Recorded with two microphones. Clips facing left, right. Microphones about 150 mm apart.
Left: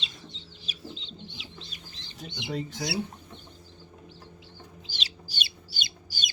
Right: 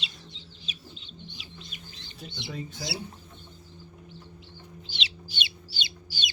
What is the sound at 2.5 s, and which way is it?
Speech, 85° left.